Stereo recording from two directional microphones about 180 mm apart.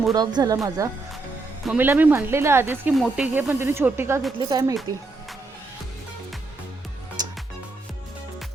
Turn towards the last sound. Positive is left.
turn(degrees=-20)  # may be behind; listen again after turning